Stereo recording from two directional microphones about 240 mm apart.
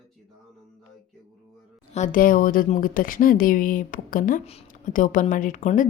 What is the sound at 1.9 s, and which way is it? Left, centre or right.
A woman's voice, left.